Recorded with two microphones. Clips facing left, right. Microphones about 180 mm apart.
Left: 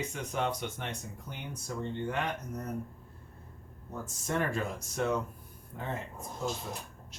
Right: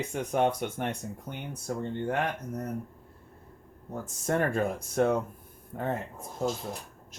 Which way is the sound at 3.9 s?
50° right (ahead or behind).